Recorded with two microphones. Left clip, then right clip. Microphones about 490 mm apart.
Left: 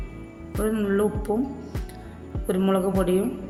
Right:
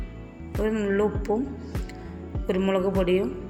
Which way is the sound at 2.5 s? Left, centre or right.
Left.